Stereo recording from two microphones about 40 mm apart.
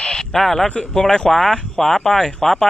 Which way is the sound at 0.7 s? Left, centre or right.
Centre.